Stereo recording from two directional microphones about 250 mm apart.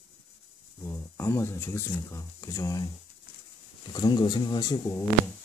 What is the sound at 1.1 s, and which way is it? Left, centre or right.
Speech, centre.